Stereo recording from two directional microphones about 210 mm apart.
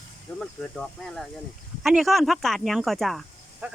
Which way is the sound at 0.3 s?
5° left (ahead or behind).